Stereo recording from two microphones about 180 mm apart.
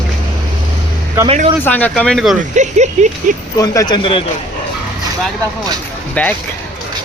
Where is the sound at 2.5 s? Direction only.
40° right (ahead or behind).